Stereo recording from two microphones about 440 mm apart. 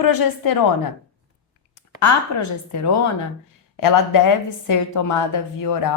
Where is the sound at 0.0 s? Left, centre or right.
Left.